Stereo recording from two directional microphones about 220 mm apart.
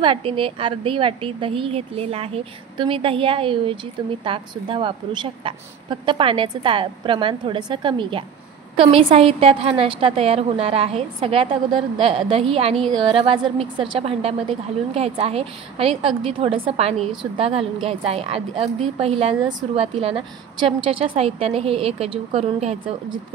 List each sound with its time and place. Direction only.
0.0 s a woman's voice: 25° right (ahead or behind)